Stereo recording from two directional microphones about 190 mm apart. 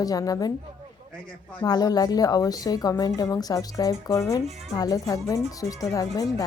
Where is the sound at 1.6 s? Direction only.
20° left (ahead or behind).